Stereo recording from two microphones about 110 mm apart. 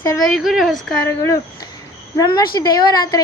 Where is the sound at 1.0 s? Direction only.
25° left (ahead or behind).